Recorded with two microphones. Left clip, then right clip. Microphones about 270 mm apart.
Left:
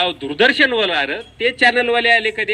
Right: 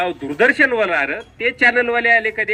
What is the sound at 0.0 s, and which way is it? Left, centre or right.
A man's voice, centre.